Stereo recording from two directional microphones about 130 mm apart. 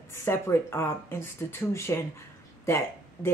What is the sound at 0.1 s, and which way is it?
Speech, 20° left (ahead or behind).